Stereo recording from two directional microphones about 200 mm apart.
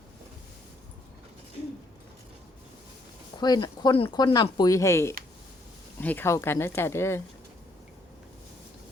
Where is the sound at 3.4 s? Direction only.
20° left (ahead or behind).